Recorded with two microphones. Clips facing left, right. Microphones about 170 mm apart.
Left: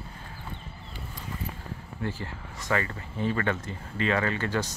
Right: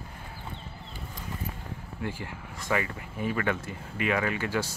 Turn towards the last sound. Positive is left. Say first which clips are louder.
# left 1 dB
turn(degrees=-10)  # may be behind; listen again after turning